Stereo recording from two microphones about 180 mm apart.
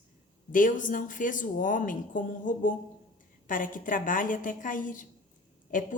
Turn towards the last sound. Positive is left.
turn(degrees=45)  # may be behind; listen again after turning